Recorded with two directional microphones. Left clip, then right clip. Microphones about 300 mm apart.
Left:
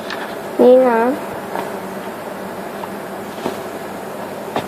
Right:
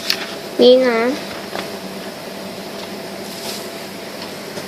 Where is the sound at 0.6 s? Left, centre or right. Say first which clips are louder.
Left 1 dB; right.